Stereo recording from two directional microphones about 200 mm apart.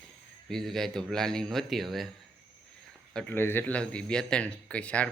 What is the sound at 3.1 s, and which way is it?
Speech, 5° left (ahead or behind).